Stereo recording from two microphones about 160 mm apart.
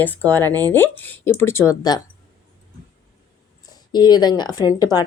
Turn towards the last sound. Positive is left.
turn(degrees=25)  # may be behind; listen again after turning